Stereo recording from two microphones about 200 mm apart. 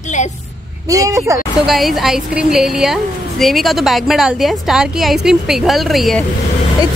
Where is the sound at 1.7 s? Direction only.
Centre (ahead or behind).